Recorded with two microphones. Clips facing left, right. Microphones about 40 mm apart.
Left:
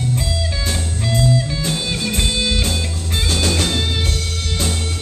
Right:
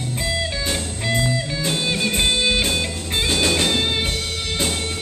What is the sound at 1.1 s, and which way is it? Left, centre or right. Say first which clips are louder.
Music: left 3 dB; centre.